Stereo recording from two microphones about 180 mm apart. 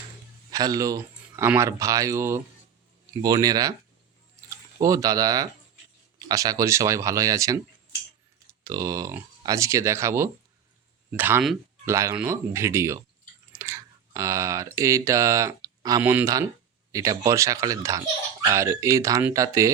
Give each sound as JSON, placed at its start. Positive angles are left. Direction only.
{"t": 0.5, "sound": "speech", "side_deg": -20}
{"t": 8.6, "sound": "speech", "side_deg": -20}